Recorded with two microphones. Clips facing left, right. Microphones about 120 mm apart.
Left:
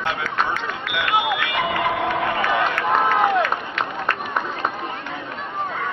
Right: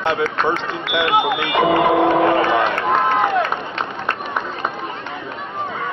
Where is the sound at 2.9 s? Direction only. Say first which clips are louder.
Even; centre (ahead or behind).